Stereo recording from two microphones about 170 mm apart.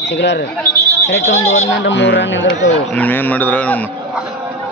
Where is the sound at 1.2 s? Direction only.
40° left (ahead or behind).